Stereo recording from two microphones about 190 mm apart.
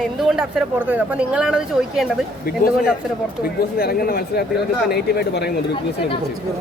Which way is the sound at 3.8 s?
50° left (ahead or behind).